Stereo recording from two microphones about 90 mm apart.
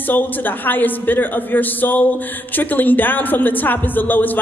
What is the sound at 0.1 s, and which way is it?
Speech, 20° left (ahead or behind).